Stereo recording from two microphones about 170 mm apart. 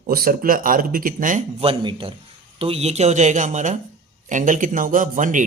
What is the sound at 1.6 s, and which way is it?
Speech, 30° right (ahead or behind).